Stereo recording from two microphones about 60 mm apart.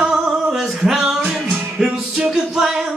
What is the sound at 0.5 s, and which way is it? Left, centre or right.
Music, centre.